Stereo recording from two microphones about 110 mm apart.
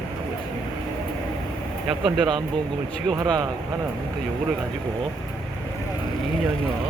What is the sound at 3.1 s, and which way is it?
Speech, 35° right (ahead or behind).